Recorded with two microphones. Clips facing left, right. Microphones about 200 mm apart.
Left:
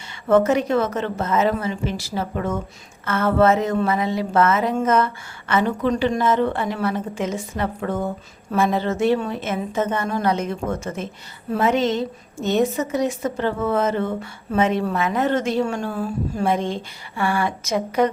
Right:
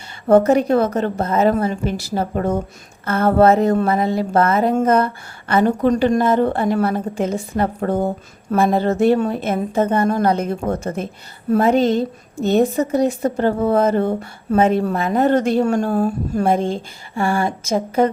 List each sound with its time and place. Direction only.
0.3 s a woman's voice: 35° right (ahead or behind)
3.8 s a woman's voice: 45° right (ahead or behind)